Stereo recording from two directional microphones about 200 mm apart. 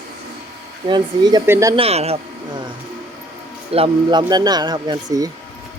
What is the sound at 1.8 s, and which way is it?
Speech, 30° right (ahead or behind).